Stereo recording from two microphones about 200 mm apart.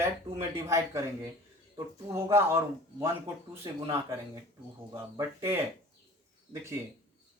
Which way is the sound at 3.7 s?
15° right (ahead or behind).